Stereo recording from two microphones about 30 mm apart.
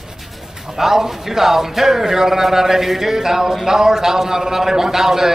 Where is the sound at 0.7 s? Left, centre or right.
Centre.